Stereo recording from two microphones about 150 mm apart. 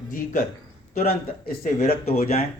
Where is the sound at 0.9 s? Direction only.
50° left (ahead or behind).